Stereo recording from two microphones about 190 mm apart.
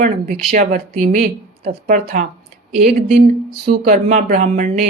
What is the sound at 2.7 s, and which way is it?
A woman's voice, 50° right (ahead or behind).